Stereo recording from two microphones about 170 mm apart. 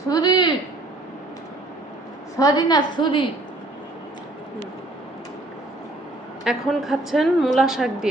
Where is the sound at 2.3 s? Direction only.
20° left (ahead or behind).